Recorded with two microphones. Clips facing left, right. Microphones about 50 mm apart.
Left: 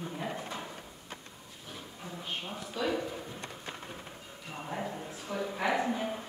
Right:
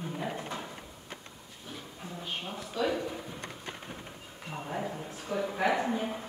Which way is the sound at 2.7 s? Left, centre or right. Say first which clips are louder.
Right 2 dB; centre.